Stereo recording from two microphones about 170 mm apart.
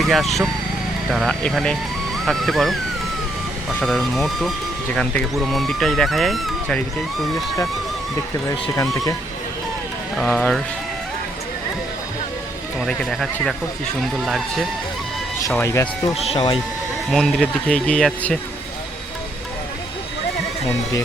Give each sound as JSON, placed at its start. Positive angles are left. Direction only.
{"t": 0.0, "sound": "speech", "side_deg": 0}
{"t": 8.7, "sound": "speech", "side_deg": 20}
{"t": 10.2, "sound": "speech", "side_deg": 10}
{"t": 12.8, "sound": "speech", "side_deg": 0}
{"t": 15.4, "sound": "speech", "side_deg": 15}
{"t": 16.1, "sound": "speech", "side_deg": 35}
{"t": 17.1, "sound": "speech", "side_deg": 0}